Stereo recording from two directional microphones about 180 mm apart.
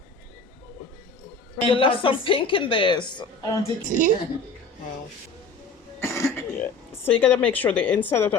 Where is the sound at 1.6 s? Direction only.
30° left (ahead or behind).